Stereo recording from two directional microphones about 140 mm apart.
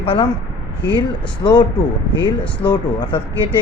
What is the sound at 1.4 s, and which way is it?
Speech, 30° left (ahead or behind).